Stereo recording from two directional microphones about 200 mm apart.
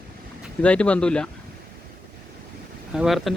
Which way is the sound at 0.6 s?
5° left (ahead or behind).